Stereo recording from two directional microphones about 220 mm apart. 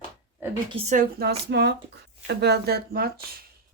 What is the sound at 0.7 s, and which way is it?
Speech, 30° right (ahead or behind).